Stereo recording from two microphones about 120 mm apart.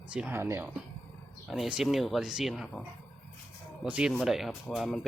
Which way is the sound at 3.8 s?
5° right (ahead or behind).